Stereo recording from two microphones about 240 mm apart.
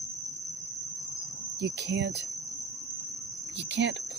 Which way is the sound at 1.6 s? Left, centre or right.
Right.